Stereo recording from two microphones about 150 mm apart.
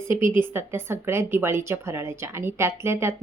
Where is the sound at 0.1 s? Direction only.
15° right (ahead or behind).